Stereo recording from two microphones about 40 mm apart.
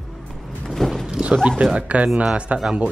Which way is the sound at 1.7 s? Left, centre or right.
Right.